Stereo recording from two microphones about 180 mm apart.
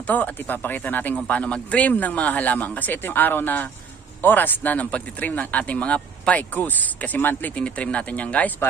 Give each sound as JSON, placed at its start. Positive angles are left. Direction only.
{"t": 0.0, "sound": "speech", "side_deg": 10}